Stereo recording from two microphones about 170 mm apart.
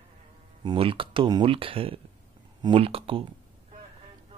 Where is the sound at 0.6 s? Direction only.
30° right (ahead or behind).